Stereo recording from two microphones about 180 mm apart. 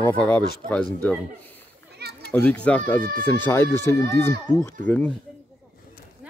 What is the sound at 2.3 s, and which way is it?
Speech, 5° left (ahead or behind).